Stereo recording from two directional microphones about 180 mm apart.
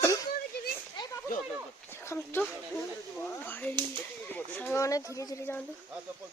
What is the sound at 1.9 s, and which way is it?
Speech, 10° left (ahead or behind).